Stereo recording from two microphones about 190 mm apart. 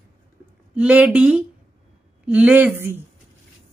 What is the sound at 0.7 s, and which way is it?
Speech, 5° right (ahead or behind).